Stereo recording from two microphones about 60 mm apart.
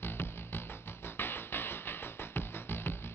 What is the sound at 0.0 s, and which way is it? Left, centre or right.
Music, left.